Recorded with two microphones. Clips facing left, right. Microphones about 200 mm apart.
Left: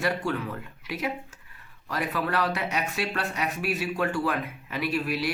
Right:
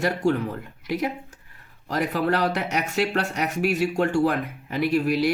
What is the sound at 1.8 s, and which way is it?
Speech, 40° right (ahead or behind).